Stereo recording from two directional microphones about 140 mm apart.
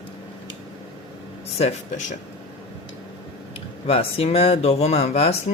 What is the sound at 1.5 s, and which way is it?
Speech, 55° left (ahead or behind).